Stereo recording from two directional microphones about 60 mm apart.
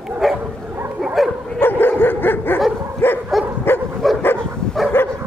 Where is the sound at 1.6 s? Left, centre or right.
Left.